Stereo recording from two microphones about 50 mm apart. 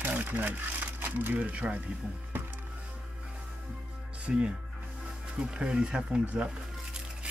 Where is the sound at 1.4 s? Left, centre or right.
Right.